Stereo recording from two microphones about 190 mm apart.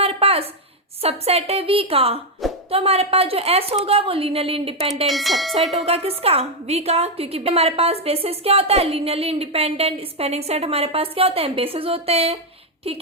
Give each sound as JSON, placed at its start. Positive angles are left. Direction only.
{"t": 0.0, "sound": "a sound", "side_deg": -30}
{"t": 1.0, "sound": "a woman's voice", "side_deg": -35}
{"t": 5.0, "sound": "speech", "side_deg": 0}
{"t": 5.7, "sound": "a woman's voice", "side_deg": -30}